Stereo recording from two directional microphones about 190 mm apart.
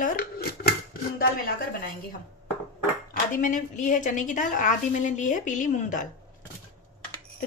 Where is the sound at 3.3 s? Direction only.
45° left (ahead or behind).